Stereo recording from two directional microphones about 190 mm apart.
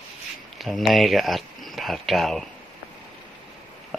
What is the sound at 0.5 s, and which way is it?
Speech, centre (ahead or behind).